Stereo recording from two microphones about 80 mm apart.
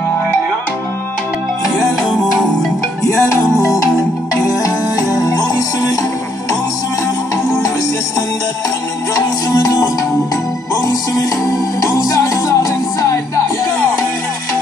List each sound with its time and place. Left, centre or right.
3.0 s music: left
9.5 s music: left
10.9 s music: left